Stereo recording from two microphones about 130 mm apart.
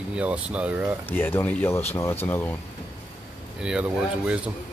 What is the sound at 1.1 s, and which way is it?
Speech, 15° left (ahead or behind).